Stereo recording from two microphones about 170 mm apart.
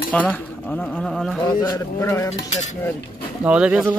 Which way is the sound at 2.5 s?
45° left (ahead or behind).